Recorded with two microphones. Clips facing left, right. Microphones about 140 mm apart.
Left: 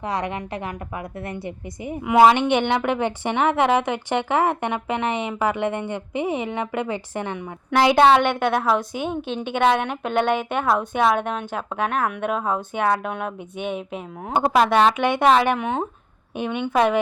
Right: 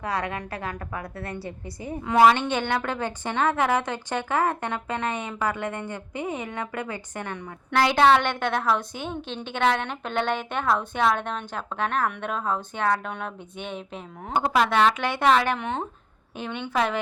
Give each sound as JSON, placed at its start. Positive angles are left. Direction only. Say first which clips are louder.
{"t": 0.0, "sound": "a woman's voice", "louder": "left 3 dB", "side_deg": 20}
{"t": 14.3, "sound": "a woman's voice", "louder": "left 4 dB", "side_deg": 25}